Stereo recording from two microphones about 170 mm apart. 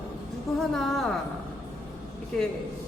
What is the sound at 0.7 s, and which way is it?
Speech, centre (ahead or behind).